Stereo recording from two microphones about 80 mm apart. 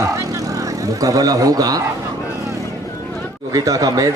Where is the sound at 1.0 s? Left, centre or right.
Right.